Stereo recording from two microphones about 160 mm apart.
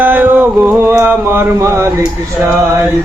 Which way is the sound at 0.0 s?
10° right (ahead or behind).